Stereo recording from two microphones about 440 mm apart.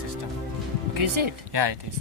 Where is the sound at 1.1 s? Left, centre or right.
Right.